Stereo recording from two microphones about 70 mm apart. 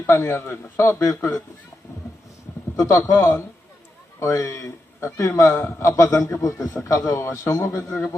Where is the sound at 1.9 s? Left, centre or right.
Left.